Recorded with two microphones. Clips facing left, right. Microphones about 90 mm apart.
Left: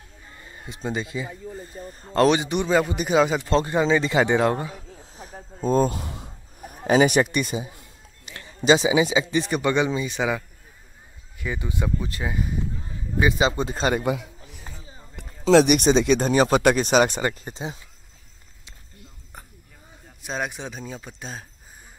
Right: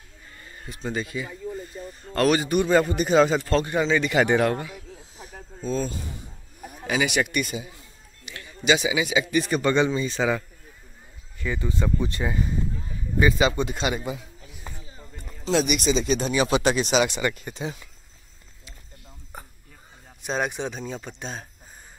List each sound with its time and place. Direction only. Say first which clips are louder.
0.3 s a sound: left 1 dB; 20° left (ahead or behind)
0.8 s speech: left 1 dB; 20° left (ahead or behind)
4.6 s a sound: left 2 dB; 35° left (ahead or behind); by 6.3 s 80° left
6.9 s a man's voice: left 6 dB; 35° left (ahead or behind); by 11.9 s 15° left (ahead or behind)
12.0 s speech: right 2 dB; 5° left (ahead or behind)
13.2 s speech: even; 25° left (ahead or behind)
13.9 s a sound: left 7 dB; 65° left (ahead or behind)
15.1 s speech: left 8 dB; 65° left (ahead or behind); by 17.6 s 35° left (ahead or behind)
20.2 s speech: right 3 dB; centre (ahead or behind)